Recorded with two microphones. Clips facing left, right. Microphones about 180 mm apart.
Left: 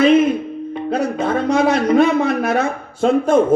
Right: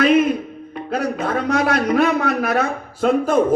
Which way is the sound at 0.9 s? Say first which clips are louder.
Left 2 dB; 25° left (ahead or behind).